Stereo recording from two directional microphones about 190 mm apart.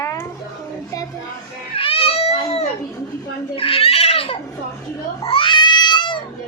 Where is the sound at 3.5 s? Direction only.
30° left (ahead or behind).